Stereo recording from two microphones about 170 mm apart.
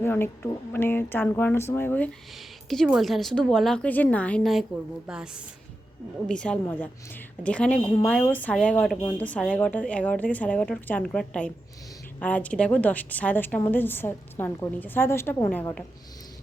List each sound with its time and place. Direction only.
0.0 s a woman's voice: 15° left (ahead or behind)
2.6 s a woman's voice: centre (ahead or behind)